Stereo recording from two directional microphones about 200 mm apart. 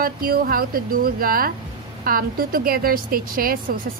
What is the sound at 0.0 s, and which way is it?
A woman's voice, 45° right (ahead or behind).